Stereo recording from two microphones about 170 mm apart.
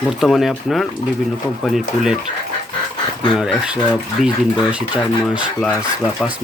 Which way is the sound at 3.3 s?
Centre (ahead or behind).